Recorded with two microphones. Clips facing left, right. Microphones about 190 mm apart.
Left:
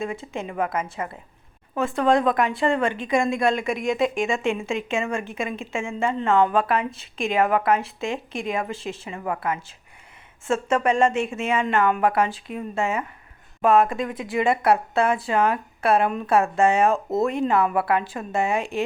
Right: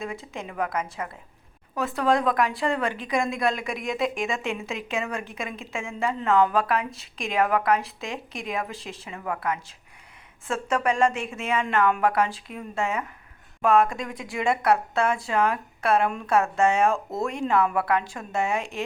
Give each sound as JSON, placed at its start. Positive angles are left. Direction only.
{"t": 0.0, "sound": "a woman's voice", "side_deg": 0}
{"t": 9.1, "sound": "a woman's voice", "side_deg": 15}
{"t": 10.7, "sound": "speech", "side_deg": 30}
{"t": 11.9, "sound": "a woman's voice", "side_deg": 0}